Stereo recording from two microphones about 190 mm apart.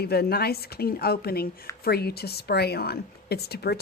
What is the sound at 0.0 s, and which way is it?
A woman's voice, 55° left (ahead or behind).